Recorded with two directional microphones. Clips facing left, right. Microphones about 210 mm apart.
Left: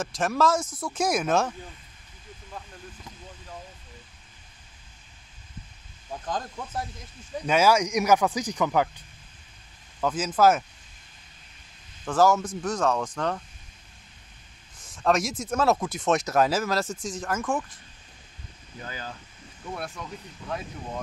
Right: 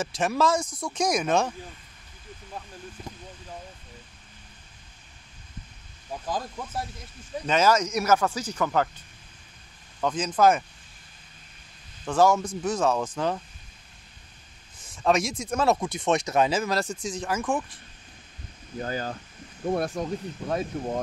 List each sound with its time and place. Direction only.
0.0 s speech: centre (ahead or behind)
6.2 s speech: 5° right (ahead or behind)
7.4 s speech: 10° left (ahead or behind)
12.0 s speech: centre (ahead or behind)
14.8 s speech: centre (ahead or behind)
18.8 s speech: 45° right (ahead or behind)